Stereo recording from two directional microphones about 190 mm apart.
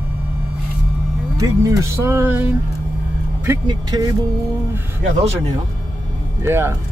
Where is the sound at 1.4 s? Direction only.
15° right (ahead or behind).